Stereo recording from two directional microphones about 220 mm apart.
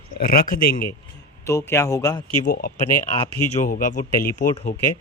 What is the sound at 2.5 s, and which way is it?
Speech, 45° left (ahead or behind).